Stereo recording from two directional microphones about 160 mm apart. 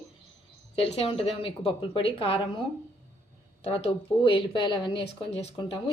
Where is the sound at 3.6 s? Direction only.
40° left (ahead or behind).